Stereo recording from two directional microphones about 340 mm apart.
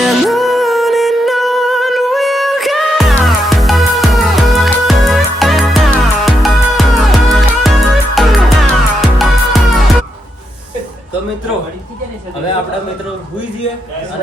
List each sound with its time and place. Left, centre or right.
0.0 s music: centre